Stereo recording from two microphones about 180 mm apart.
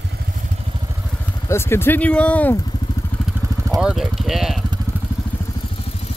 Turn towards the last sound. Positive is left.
turn(degrees=0)  # may be behind; listen again after turning